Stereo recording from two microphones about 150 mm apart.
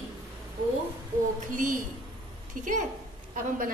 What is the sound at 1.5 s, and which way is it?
A woman's voice, 60° right (ahead or behind).